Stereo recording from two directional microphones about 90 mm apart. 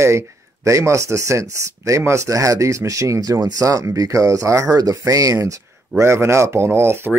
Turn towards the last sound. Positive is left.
turn(degrees=-25)  # may be behind; listen again after turning